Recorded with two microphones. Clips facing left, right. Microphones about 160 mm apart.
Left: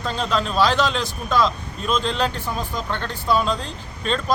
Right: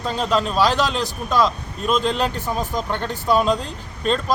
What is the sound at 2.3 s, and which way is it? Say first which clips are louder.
Speech: right 3 dB; 45° right (ahead or behind).